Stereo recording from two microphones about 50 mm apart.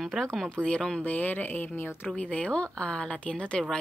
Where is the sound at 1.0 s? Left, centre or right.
Left.